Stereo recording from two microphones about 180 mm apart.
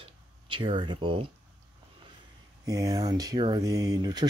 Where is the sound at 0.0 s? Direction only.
30° right (ahead or behind).